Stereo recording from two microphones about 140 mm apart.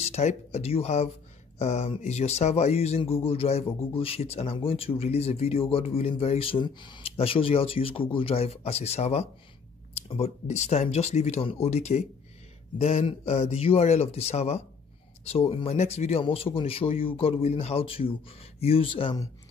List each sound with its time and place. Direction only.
0.0 s speech: 50° left (ahead or behind)